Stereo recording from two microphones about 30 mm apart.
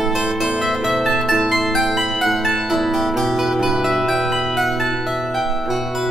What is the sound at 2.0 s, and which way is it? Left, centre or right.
Harp, centre.